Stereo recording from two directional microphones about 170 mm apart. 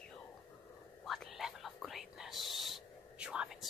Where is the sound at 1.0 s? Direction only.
Centre (ahead or behind).